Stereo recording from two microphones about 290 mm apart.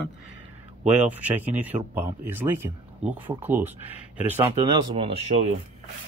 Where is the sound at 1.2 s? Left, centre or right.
Centre; by 5.5 s right.